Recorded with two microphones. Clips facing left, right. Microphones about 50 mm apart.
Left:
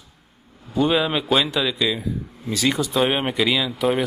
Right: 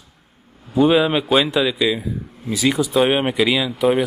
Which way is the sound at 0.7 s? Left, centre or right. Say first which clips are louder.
Right 5 dB; centre.